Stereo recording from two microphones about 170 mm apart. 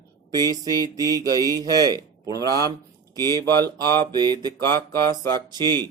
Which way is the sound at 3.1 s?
25° right (ahead or behind).